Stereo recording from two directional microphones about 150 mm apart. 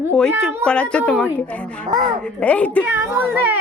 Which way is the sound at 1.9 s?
30° right (ahead or behind).